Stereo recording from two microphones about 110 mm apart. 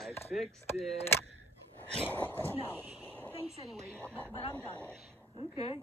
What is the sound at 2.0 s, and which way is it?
Speech, 15° left (ahead or behind).